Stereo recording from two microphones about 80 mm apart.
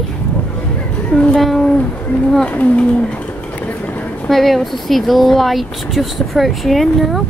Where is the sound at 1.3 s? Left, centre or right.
Centre; by 4.3 s left.